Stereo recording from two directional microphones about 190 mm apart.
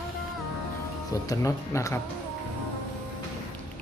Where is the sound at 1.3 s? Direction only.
15° left (ahead or behind).